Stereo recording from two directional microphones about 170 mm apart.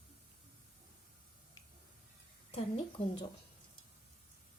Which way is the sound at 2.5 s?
35° left (ahead or behind).